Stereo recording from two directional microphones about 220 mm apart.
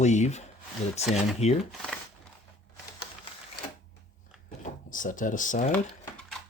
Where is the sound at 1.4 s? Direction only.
30° left (ahead or behind).